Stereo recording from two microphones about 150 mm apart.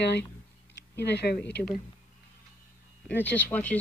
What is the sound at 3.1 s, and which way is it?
Speech, 10° left (ahead or behind).